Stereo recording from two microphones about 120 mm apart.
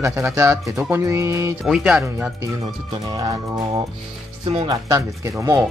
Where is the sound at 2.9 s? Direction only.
35° right (ahead or behind).